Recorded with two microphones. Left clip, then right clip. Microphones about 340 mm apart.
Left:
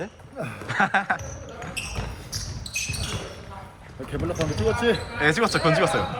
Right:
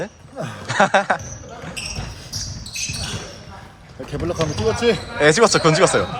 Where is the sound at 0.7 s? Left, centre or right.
Centre.